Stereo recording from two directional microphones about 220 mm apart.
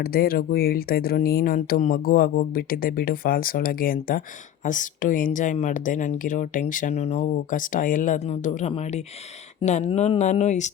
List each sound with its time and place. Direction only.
0.0 s a woman's voice: 45° left (ahead or behind)